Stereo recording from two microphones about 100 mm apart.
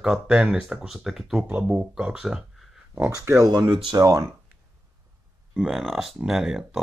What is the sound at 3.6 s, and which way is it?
Speech, 55° right (ahead or behind).